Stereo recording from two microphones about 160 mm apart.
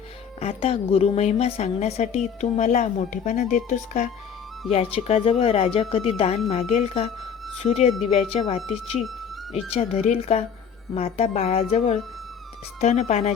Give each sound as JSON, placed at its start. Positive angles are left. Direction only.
{"t": 0.3, "sound": "a woman's voice", "side_deg": 40}
{"t": 4.7, "sound": "speech", "side_deg": 40}
{"t": 9.0, "sound": "music", "side_deg": 0}
{"t": 9.7, "sound": "a woman's voice", "side_deg": 40}